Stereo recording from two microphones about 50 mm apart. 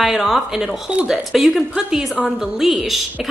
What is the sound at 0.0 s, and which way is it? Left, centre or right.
A woman's voice, centre.